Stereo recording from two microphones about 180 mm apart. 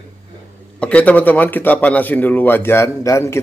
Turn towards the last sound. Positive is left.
turn(degrees=15)  # may be behind; listen again after turning